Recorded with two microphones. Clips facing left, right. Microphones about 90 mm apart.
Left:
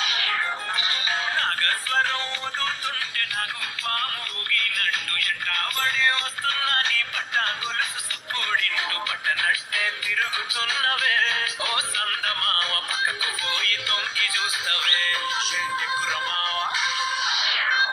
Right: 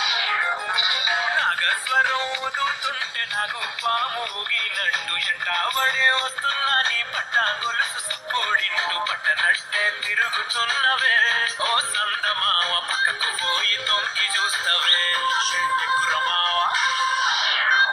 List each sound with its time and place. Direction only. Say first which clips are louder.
0.0 s music: right 3 dB; 15° right (ahead or behind)
3.8 s music: right 6 dB; 20° right (ahead or behind); by 17.8 s 45° right (ahead or behind)